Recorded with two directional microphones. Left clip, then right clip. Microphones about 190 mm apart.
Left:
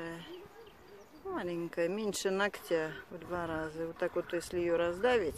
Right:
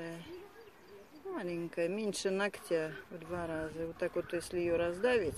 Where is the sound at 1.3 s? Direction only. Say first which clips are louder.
Left 2 dB; centre (ahead or behind).